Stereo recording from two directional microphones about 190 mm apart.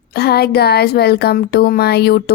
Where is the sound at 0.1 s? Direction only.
55° left (ahead or behind).